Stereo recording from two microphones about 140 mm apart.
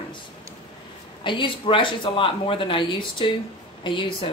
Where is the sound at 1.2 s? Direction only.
35° left (ahead or behind).